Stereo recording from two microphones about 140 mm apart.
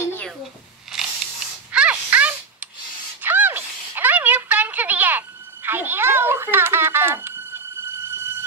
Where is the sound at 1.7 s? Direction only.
10° right (ahead or behind).